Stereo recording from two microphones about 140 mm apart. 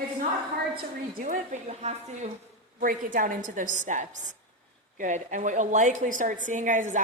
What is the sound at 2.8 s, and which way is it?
A woman's voice, 75° right (ahead or behind).